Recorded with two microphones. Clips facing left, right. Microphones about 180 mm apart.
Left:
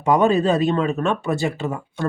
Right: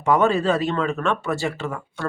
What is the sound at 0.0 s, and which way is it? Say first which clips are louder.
Speech: left 2 dB; 15° left (ahead or behind).